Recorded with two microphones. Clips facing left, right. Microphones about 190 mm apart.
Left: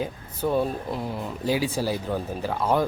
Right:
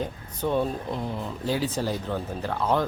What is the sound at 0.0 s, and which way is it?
Speech, 5° left (ahead or behind).